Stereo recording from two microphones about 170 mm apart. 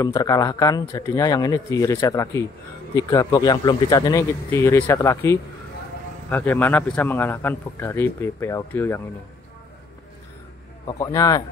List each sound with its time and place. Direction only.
0.0 s a man's voice: 20° left (ahead or behind)
11.0 s speech: 20° left (ahead or behind)